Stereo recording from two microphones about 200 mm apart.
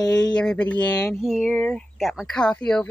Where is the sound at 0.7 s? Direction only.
20° left (ahead or behind).